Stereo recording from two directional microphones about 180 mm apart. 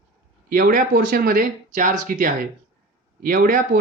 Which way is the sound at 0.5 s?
50° right (ahead or behind).